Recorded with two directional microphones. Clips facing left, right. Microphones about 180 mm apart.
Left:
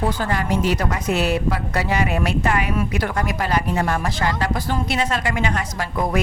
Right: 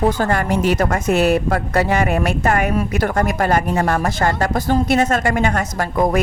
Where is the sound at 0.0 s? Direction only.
45° right (ahead or behind).